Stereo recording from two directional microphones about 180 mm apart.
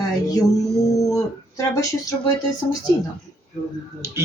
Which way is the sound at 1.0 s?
20° left (ahead or behind).